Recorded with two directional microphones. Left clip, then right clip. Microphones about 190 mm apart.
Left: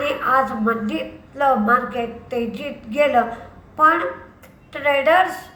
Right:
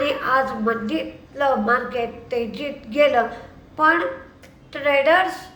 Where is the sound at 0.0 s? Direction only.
10° right (ahead or behind).